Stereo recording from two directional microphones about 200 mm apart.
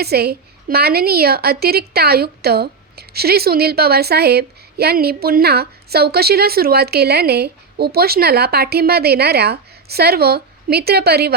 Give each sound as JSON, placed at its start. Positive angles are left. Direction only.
{"t": 0.0, "sound": "a woman's voice", "side_deg": -50}